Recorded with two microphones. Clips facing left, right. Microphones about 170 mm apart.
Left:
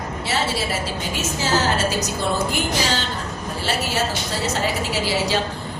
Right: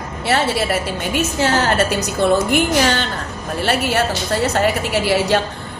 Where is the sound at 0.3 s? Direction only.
60° right (ahead or behind).